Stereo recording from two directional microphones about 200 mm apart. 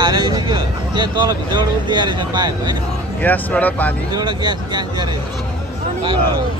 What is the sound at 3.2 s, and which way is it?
Speech, 10° left (ahead or behind).